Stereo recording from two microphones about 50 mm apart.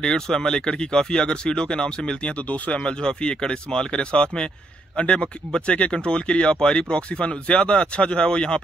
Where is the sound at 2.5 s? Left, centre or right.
Left.